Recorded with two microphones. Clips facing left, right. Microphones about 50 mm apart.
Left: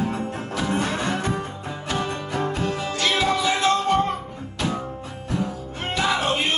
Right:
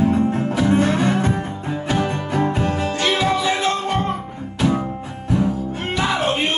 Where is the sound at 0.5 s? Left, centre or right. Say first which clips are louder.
Right 4 dB; centre.